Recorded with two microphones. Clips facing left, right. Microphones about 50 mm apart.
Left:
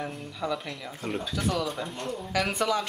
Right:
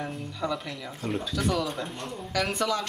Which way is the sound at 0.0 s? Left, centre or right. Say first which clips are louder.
Right 1 dB; centre.